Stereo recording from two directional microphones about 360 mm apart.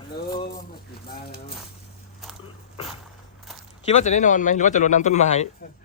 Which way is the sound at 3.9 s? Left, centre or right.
Centre.